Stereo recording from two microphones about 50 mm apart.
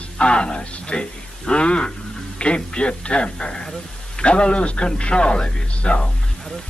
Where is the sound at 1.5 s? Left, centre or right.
Left.